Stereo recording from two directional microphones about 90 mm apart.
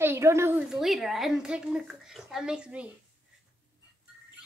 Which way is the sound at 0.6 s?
5° right (ahead or behind).